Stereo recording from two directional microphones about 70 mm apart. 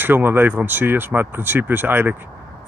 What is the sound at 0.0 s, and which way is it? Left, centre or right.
Speech, right.